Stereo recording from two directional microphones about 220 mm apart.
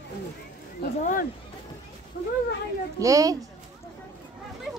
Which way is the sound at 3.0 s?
15° right (ahead or behind).